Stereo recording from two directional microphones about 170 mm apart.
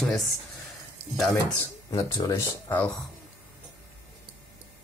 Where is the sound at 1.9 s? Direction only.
20° left (ahead or behind).